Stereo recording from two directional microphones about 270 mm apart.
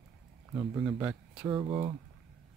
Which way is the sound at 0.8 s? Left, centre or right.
Centre.